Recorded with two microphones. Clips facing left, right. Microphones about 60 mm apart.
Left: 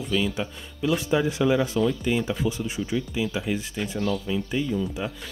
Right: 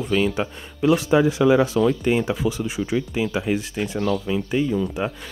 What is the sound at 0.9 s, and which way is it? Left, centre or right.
Speech, right.